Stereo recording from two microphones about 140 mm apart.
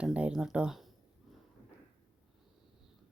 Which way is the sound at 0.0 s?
10° right (ahead or behind).